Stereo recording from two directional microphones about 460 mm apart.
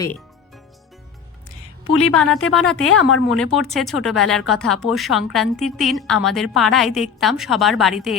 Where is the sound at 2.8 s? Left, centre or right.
Left.